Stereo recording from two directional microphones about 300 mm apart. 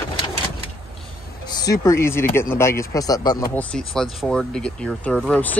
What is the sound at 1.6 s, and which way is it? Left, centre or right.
Speech, centre.